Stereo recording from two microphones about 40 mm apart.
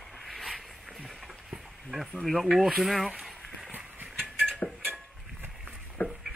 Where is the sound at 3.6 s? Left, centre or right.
Right.